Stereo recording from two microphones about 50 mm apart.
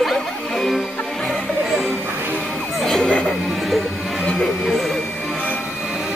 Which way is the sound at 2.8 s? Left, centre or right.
Centre.